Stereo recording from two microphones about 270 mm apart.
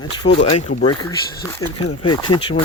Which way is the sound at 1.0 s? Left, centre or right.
Centre.